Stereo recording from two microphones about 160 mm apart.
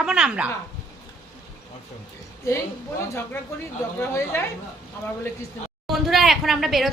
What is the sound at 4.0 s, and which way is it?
Speech, 15° left (ahead or behind).